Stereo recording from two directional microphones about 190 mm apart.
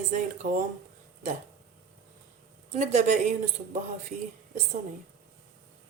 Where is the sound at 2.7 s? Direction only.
40° right (ahead or behind).